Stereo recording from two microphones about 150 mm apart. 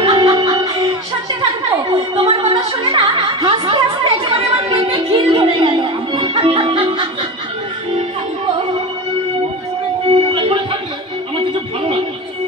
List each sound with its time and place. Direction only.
0.0 s music: 25° right (ahead or behind)
1.4 s a sound: 30° right (ahead or behind)
10.0 s music: 35° right (ahead or behind)